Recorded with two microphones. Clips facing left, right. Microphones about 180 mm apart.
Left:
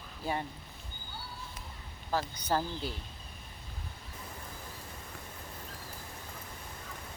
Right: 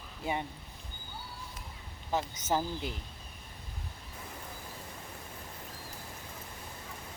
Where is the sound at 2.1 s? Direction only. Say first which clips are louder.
Even; 20° right (ahead or behind).